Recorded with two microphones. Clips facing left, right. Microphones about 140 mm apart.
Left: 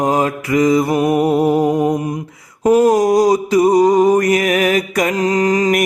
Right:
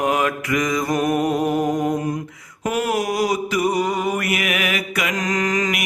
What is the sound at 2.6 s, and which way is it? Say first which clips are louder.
Mantra: left 10 dB; 40° left (ahead or behind).